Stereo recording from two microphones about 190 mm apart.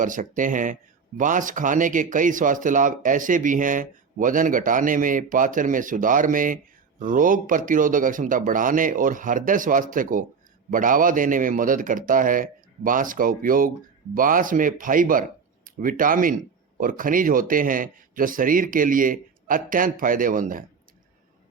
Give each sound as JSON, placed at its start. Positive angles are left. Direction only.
{"t": 0.0, "sound": "speech", "side_deg": -45}